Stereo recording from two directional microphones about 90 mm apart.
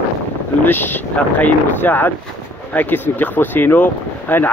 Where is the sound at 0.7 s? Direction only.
20° left (ahead or behind).